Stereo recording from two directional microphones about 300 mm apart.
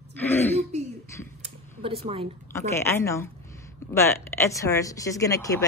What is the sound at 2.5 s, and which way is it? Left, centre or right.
Speech, centre.